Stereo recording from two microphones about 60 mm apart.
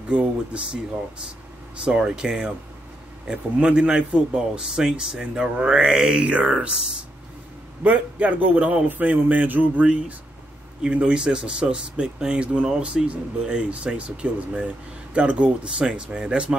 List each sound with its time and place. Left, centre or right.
0.1 s speech: centre
1.9 s speech: centre
7.8 s speech: right